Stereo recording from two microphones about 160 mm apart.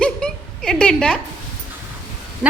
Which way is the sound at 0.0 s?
5° left (ahead or behind).